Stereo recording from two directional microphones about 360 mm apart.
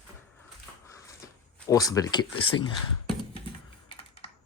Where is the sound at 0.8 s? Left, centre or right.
Centre.